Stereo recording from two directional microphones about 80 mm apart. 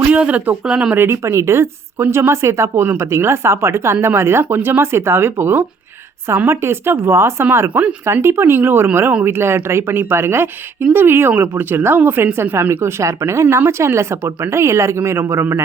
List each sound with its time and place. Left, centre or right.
0.1 s speech: centre
0.9 s speech: right
7.7 s speech: centre
8.0 s speech: right